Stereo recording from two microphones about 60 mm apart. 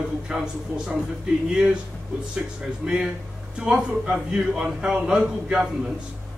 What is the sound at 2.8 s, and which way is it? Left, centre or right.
A man's voice, centre.